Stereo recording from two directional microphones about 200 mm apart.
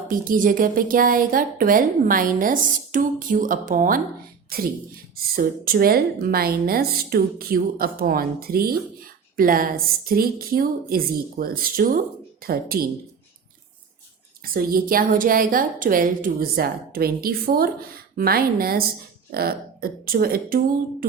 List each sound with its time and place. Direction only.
0.1 s speech: 45° right (ahead or behind)
14.4 s speech: 45° right (ahead or behind)